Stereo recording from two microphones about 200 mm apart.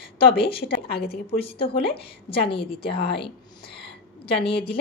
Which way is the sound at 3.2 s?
25° left (ahead or behind).